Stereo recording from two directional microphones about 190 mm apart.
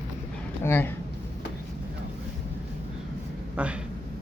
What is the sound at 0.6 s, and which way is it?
Speech, 10° left (ahead or behind).